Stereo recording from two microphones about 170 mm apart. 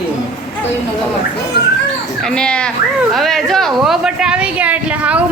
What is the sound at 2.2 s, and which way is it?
Speech, 5° left (ahead or behind).